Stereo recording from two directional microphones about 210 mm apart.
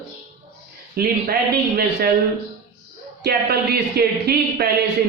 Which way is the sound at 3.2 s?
50° right (ahead or behind).